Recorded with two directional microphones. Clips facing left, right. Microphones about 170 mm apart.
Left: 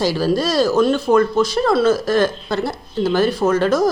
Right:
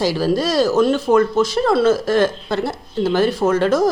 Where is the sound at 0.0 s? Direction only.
15° right (ahead or behind).